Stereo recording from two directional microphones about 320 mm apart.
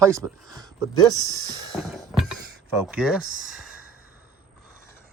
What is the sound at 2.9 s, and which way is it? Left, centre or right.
Speech, centre.